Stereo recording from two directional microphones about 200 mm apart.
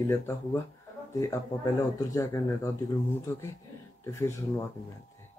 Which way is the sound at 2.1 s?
15° left (ahead or behind).